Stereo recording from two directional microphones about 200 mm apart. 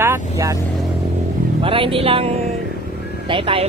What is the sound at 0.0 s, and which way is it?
Vehicle, 15° right (ahead or behind).